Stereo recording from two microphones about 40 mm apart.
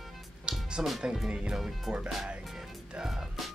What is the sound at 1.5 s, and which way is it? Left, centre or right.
Speech, centre.